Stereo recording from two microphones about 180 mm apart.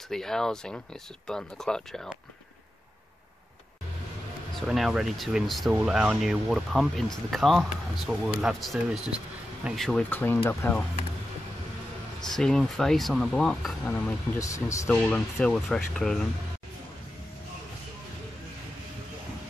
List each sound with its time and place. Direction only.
0.1 s speech: 5° left (ahead or behind)
4.6 s speech: centre (ahead or behind)
12.3 s speech: 5° left (ahead or behind)
14.9 s speech: 5° left (ahead or behind)